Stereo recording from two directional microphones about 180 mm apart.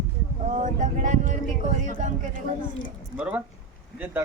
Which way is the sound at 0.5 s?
45° right (ahead or behind).